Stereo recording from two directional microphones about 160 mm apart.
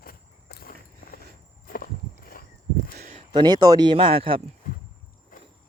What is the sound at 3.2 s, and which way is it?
Speech, 30° right (ahead or behind).